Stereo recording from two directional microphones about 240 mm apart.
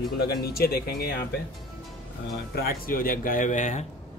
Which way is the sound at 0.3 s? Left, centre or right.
Left.